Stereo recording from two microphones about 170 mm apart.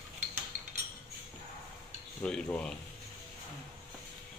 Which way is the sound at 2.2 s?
5° left (ahead or behind).